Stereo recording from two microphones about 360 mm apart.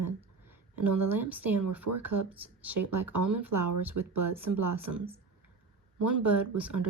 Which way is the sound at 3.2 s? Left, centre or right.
Right.